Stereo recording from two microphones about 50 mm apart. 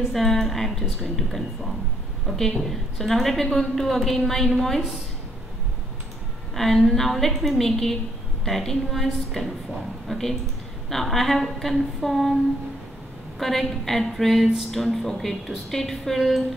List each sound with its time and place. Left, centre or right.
0.1 s a woman's voice: centre
6.5 s a woman's voice: centre
13.4 s a woman's voice: centre